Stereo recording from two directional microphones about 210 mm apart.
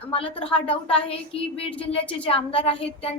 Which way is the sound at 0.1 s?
25° left (ahead or behind).